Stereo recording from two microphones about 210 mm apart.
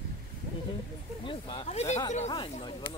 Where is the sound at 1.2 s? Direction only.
25° left (ahead or behind).